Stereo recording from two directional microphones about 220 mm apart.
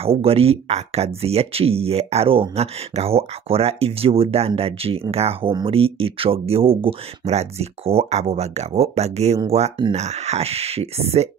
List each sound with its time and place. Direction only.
0.0 s speech: 25° right (ahead or behind)